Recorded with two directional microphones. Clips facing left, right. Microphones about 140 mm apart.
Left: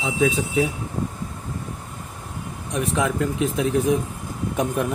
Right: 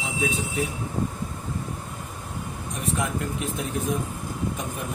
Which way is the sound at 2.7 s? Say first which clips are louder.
Left 6 dB; 80° left.